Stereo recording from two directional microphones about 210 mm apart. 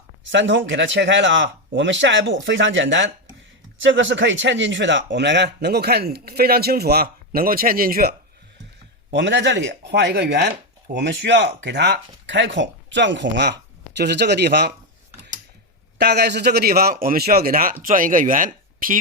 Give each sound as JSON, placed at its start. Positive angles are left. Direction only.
{"t": 0.3, "sound": "speech", "side_deg": -60}
{"t": 9.0, "sound": "speech", "side_deg": -55}
{"t": 16.0, "sound": "speech", "side_deg": -50}